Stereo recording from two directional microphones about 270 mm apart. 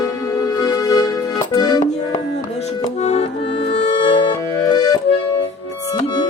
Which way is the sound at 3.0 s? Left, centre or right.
Left.